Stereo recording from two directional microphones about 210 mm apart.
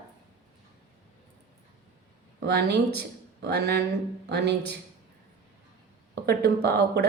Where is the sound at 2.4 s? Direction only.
50° right (ahead or behind).